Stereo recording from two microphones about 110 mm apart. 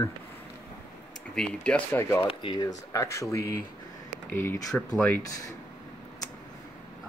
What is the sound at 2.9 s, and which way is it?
Speech, 30° left (ahead or behind).